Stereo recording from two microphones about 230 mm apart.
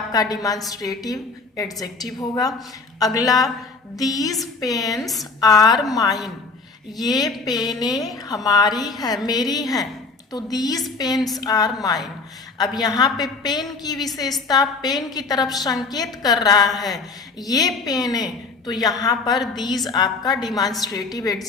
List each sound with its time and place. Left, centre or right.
0.1 s a woman's voice: centre
4.9 s a woman's voice: centre
5.4 s a woman's voice: centre